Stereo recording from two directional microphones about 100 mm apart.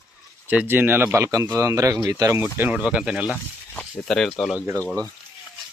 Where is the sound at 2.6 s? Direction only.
15° right (ahead or behind).